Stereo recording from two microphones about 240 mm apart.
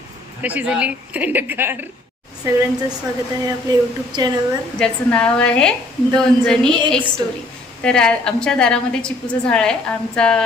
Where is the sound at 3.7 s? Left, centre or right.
Centre.